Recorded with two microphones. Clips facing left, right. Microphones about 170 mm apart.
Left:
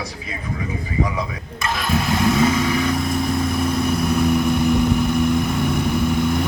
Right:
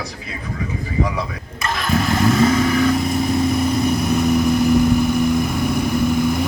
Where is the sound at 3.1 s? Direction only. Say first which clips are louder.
Right 3 dB; centre (ahead or behind).